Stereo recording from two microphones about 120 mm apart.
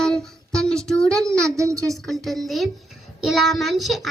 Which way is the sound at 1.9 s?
Centre (ahead or behind).